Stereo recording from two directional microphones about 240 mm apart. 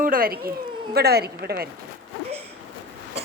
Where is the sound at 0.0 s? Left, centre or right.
Right.